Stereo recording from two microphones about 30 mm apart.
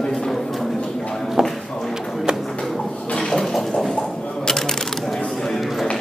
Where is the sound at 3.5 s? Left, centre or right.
Centre.